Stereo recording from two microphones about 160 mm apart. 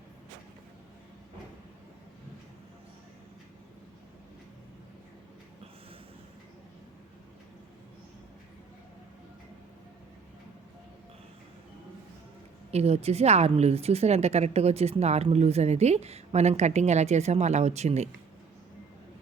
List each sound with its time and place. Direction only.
12.7 s a woman's voice: 40° right (ahead or behind)